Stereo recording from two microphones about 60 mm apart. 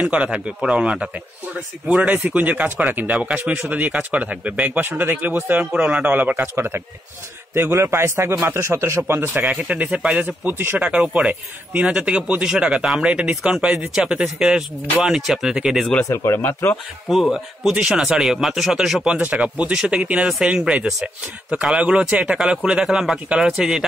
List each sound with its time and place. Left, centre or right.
0.0 s speech: centre
4.7 s a man's voice: right
9.0 s speech: right
9.4 s speech: right
10.2 s speech: right
10.8 s speech: centre
16.3 s speech: left
17.1 s speech: centre
19.3 s speech: right
22.4 s speech: centre
23.2 s speech: right
23.5 s speech: centre